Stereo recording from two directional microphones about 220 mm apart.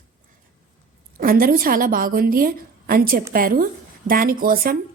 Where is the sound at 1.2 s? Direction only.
40° right (ahead or behind).